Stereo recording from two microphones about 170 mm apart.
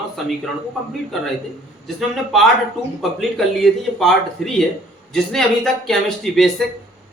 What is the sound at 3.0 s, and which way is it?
A man's voice, centre (ahead or behind).